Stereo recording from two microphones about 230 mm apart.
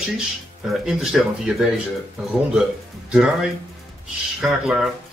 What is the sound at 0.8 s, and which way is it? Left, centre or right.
Speech, centre.